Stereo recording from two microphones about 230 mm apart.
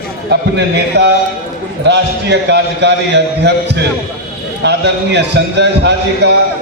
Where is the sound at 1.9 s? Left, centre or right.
Right.